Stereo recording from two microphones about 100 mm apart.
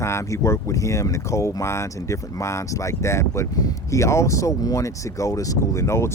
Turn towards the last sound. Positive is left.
turn(degrees=25)  # may be behind; listen again after turning